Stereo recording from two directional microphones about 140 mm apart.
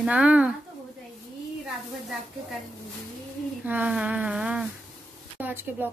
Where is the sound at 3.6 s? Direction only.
10° right (ahead or behind).